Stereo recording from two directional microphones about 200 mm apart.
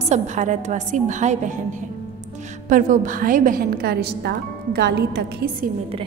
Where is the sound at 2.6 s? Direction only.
40° right (ahead or behind).